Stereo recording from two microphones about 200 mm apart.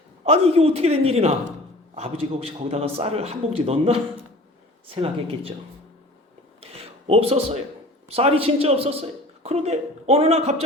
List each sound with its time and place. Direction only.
0.3 s a man's voice: 30° right (ahead or behind)
6.6 s a sound: 30° right (ahead or behind)
8.1 s a man's voice: 30° right (ahead or behind)